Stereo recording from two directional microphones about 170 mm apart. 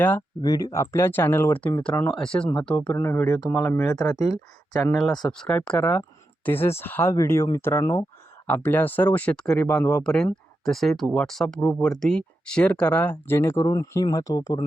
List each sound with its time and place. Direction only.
0.4 s speech: 20° left (ahead or behind)
4.9 s speech: centre (ahead or behind); by 14.6 s 20° left (ahead or behind)